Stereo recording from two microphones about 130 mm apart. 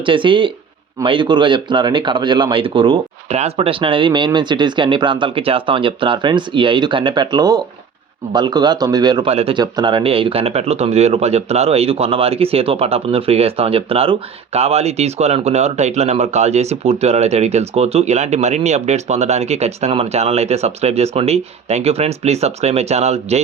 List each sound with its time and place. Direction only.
0.0 s speech: 40° right (ahead or behind)
9.2 s a man's voice: 50° right (ahead or behind)
9.6 s speech: 35° right (ahead or behind); by 23.4 s 55° right (ahead or behind)